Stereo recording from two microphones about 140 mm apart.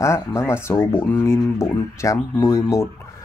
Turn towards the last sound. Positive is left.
turn(degrees=20)  # may be behind; listen again after turning